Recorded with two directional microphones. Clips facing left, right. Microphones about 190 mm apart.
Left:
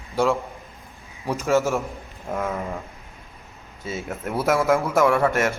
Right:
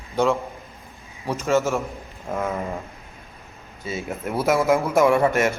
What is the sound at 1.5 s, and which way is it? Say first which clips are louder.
Speech: even; 15° right (ahead or behind).